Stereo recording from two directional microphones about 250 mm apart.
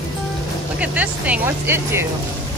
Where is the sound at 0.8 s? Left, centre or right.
Centre.